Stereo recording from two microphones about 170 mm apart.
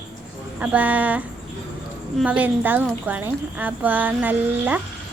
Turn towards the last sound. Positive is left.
turn(degrees=-10)  # may be behind; listen again after turning